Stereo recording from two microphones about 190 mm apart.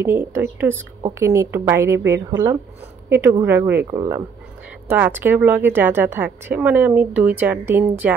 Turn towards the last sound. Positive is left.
turn(degrees=-10)  # may be behind; listen again after turning